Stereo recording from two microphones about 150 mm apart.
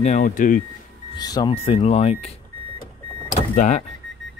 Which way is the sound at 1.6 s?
40° left (ahead or behind).